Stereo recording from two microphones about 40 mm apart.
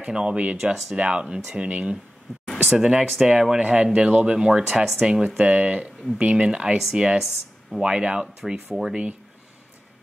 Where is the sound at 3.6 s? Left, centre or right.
Right.